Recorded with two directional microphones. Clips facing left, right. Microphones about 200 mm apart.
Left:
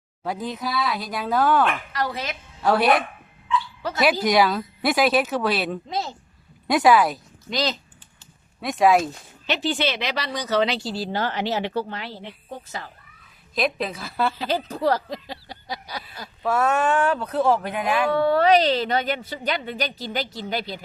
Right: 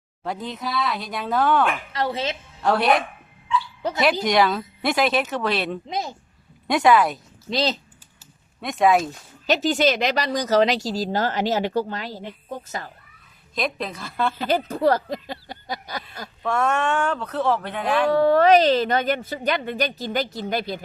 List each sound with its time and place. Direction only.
0.2 s speech: 5° left (ahead or behind)
1.9 s a woman's voice: 25° right (ahead or behind)
2.6 s speech: 5° left (ahead or behind)
4.0 s speech: 5° left (ahead or behind)
5.9 s speech: 15° right (ahead or behind)
6.7 s speech: 5° left (ahead or behind)
7.5 s a woman's voice: 30° right (ahead or behind)
8.6 s speech: centre (ahead or behind)
9.5 s speech: 45° right (ahead or behind)
13.6 s speech: 5° left (ahead or behind)
14.3 s speech: 50° right (ahead or behind)
16.4 s speech: 5° left (ahead or behind)
18.1 s speech: 45° right (ahead or behind)